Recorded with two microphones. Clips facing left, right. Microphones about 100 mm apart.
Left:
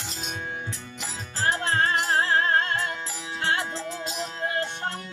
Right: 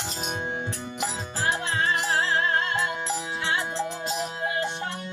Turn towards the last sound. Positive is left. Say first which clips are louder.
# right 3 dB
turn(degrees=-20)  # may be behind; listen again after turning